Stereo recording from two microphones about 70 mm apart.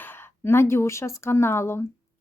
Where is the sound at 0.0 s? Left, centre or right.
Left.